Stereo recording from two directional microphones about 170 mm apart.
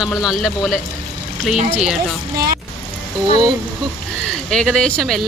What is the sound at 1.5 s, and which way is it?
Speech, 40° right (ahead or behind).